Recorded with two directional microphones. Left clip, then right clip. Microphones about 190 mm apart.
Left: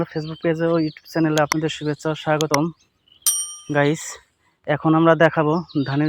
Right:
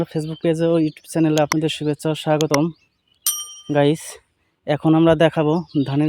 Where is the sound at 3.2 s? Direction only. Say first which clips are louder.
Left 2 dB; centre (ahead or behind).